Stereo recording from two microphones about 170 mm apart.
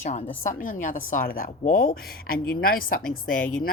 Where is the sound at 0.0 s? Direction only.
45° left (ahead or behind).